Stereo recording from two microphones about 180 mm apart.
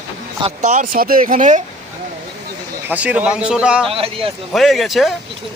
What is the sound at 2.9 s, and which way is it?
Speech, 10° right (ahead or behind).